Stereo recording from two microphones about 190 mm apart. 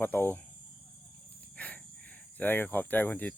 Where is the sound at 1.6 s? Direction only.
10° left (ahead or behind).